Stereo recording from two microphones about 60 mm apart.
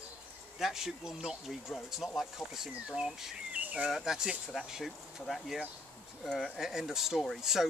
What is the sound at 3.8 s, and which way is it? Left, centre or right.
Speech, centre.